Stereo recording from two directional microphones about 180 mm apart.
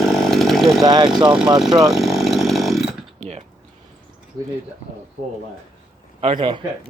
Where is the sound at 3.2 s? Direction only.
35° right (ahead or behind).